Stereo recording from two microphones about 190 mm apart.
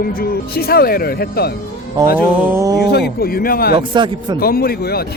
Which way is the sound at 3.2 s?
50° left (ahead or behind).